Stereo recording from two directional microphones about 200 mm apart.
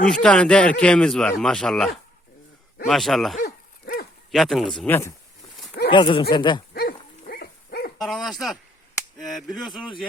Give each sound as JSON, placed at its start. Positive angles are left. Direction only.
{"t": 0.0, "sound": "speech", "side_deg": 5}
{"t": 3.3, "sound": "dog", "side_deg": 50}
{"t": 4.3, "sound": "speech", "side_deg": 0}
{"t": 5.9, "sound": "speech", "side_deg": 25}
{"t": 6.7, "sound": "dog", "side_deg": 50}
{"t": 7.9, "sound": "speech", "side_deg": 0}